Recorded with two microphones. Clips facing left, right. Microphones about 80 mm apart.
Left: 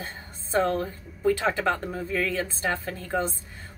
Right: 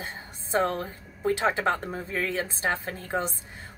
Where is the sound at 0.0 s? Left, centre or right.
Right.